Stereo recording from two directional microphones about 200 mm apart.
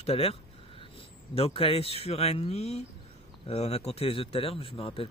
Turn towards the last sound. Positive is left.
turn(degrees=25)  # may be behind; listen again after turning